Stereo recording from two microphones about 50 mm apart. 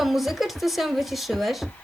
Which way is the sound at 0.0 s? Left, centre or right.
Centre.